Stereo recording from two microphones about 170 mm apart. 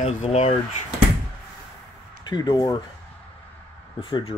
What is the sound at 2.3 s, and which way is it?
Speech, 25° left (ahead or behind).